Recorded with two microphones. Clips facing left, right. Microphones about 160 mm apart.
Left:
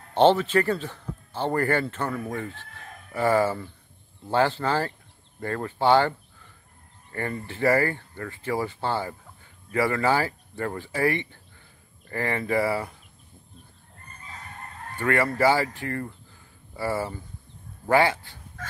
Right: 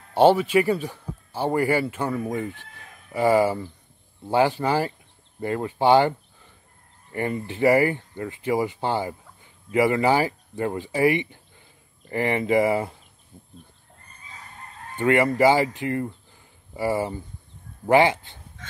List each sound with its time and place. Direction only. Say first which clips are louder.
0.1 s speech: right 2 dB; 10° right (ahead or behind)
15.0 s speech: right 4 dB; 20° right (ahead or behind)